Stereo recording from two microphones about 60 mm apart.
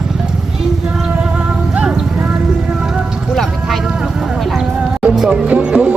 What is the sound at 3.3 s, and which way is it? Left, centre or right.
Music, centre.